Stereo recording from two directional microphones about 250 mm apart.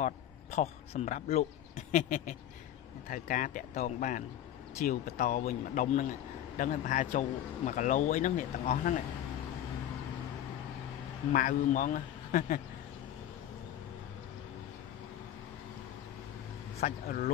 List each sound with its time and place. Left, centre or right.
0.0 s a man's voice: left
11.3 s a man's voice: left
16.8 s a man's voice: left